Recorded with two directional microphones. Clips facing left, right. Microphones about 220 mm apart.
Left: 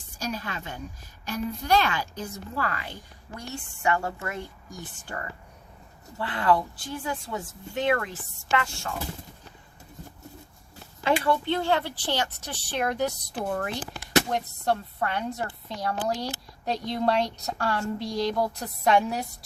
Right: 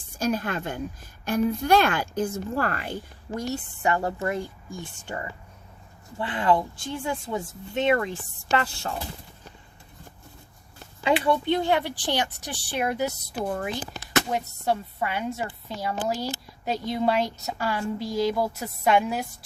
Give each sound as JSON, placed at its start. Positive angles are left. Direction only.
{"t": 0.2, "sound": "a woman's voice", "side_deg": -50}
{"t": 8.5, "sound": "speech", "side_deg": -35}
{"t": 11.0, "sound": "speech", "side_deg": -15}